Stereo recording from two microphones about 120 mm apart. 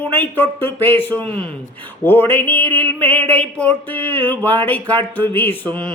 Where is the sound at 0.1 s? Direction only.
15° left (ahead or behind).